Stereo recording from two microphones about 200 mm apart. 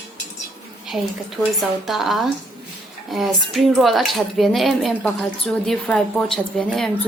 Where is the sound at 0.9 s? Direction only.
Centre (ahead or behind).